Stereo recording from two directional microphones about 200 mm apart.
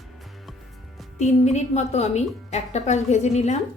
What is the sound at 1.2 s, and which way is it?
A woman's voice, 35° left (ahead or behind).